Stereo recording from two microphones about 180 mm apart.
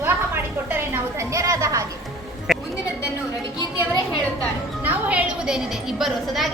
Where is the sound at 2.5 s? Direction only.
Centre (ahead or behind).